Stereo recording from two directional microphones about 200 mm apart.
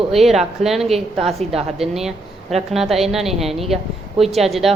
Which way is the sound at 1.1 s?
30° right (ahead or behind).